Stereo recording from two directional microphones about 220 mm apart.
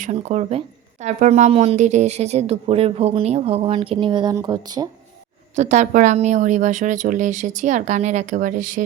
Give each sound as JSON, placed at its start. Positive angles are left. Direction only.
{"t": 0.0, "sound": "a woman's voice", "side_deg": -30}
{"t": 5.5, "sound": "speech", "side_deg": -30}